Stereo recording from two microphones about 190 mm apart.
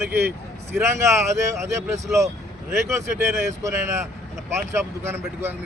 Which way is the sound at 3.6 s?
15° right (ahead or behind).